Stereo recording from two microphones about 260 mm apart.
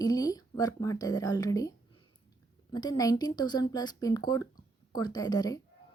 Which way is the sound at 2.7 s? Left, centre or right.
Centre.